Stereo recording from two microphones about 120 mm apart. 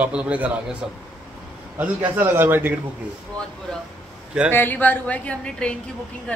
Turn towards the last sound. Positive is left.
turn(degrees=10)  # may be behind; listen again after turning